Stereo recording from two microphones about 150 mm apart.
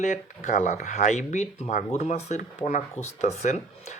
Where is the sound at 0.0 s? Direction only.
55° left (ahead or behind).